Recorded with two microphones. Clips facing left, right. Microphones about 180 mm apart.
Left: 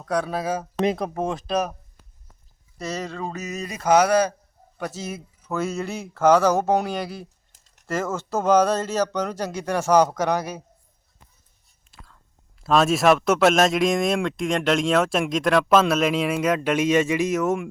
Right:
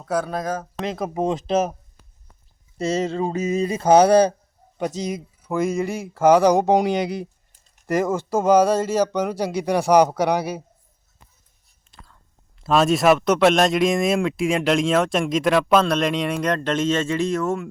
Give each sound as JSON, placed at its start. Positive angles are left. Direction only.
{"t": 0.0, "sound": "a man's voice", "side_deg": 0}
{"t": 1.1, "sound": "speech", "side_deg": -20}
{"t": 2.7, "sound": "speech", "side_deg": -25}
{"t": 4.8, "sound": "speech", "side_deg": -20}
{"t": 11.9, "sound": "whispering", "side_deg": 0}
{"t": 12.6, "sound": "a man's voice", "side_deg": 0}